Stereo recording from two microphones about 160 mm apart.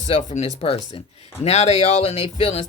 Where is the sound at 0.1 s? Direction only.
50° left (ahead or behind).